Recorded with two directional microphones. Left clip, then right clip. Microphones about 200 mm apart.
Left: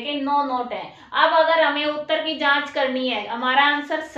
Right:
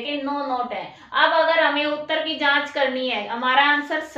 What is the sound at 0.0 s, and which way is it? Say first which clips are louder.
A woman's voice: left 4 dB; 10° left (ahead or behind).